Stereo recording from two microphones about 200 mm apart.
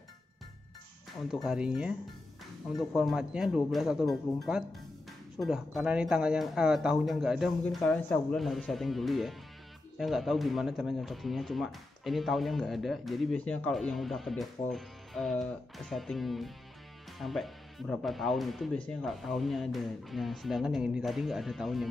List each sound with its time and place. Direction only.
1.3 s speech: centre (ahead or behind)